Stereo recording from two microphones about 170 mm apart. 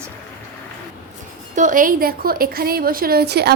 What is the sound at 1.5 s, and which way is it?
A woman's voice, 50° right (ahead or behind).